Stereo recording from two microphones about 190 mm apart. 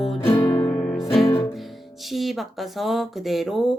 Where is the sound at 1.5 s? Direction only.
Centre (ahead or behind).